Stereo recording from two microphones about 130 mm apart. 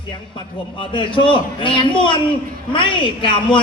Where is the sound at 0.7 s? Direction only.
40° left (ahead or behind).